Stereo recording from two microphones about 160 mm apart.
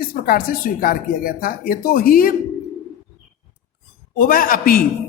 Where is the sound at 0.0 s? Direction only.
65° left (ahead or behind).